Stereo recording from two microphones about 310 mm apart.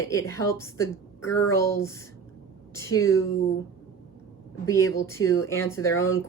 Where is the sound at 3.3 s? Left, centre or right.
Left.